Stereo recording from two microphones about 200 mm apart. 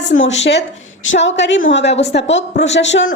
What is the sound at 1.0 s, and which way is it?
A woman's voice, 65° left (ahead or behind).